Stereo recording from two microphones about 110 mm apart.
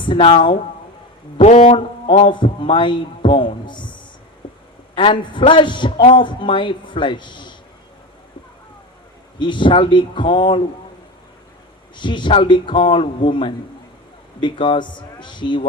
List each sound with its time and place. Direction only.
0.0 s a man's voice: 50° left (ahead or behind)
1.4 s speech: 80° left
1.7 s a man's voice: 50° left (ahead or behind)
4.4 s a sound: 50° left (ahead or behind)
4.9 s a man's voice: 50° left (ahead or behind)
9.4 s a man's voice: 45° left (ahead or behind)
11.9 s a man's voice: 45° left (ahead or behind)